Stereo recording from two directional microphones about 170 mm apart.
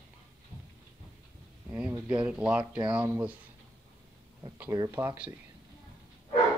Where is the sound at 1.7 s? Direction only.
10° right (ahead or behind).